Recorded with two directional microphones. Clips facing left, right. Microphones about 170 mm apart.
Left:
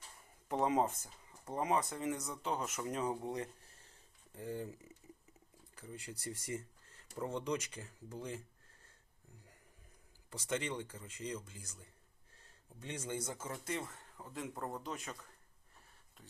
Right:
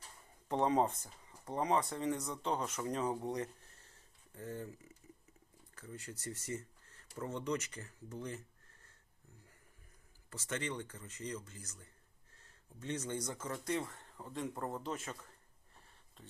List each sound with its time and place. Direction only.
0.4 s speech: 5° left (ahead or behind)
1.5 s speech: 20° left (ahead or behind)
2.2 s speech: 5° left (ahead or behind)
4.4 s speech: 15° left (ahead or behind)
10.2 s speech: 15° left (ahead or behind)